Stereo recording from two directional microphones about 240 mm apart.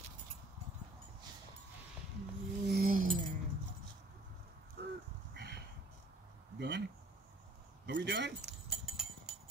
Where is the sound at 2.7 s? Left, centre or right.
Right.